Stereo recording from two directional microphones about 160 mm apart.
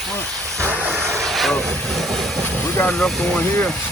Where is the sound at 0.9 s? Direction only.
15° right (ahead or behind).